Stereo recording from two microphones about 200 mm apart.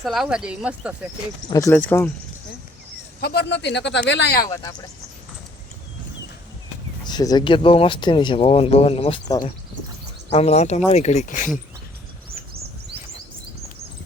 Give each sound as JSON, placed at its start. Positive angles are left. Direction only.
{"t": 0.0, "sound": "speech", "side_deg": 0}
{"t": 1.5, "sound": "speech", "side_deg": 15}
{"t": 3.2, "sound": "speech", "side_deg": 55}
{"t": 4.4, "sound": "speech", "side_deg": 15}
{"t": 7.0, "sound": "speech", "side_deg": 20}
{"t": 10.2, "sound": "speech", "side_deg": 30}